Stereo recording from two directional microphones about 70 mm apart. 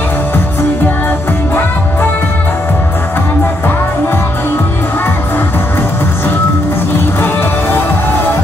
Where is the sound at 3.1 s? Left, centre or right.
Left.